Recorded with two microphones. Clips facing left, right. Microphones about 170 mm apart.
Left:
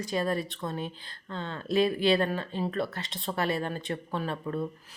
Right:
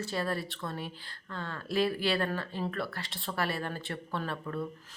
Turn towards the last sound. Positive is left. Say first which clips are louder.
# left 4 dB
turn(degrees=20)  # may be behind; listen again after turning